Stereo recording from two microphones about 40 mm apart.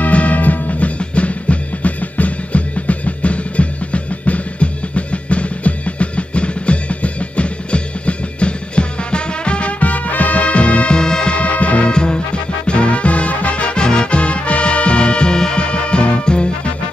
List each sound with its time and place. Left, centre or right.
0.0 s music: left
11.0 s music: centre
11.3 s music: left
11.9 s music: left
13.7 s music: left